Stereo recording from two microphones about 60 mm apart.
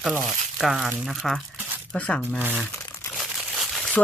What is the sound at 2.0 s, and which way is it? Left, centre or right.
Speech, left.